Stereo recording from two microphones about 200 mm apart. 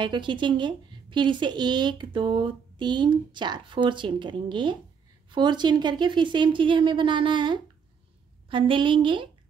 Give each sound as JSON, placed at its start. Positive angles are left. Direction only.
{"t": 0.0, "sound": "a woman's voice", "side_deg": -25}